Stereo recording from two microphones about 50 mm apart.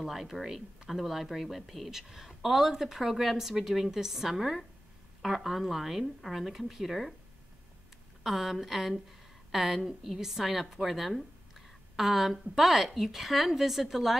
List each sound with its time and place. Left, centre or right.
0.0 s speech: centre
8.2 s a woman's voice: centre